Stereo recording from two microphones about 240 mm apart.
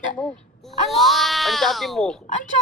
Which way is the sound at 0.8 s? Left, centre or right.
Centre.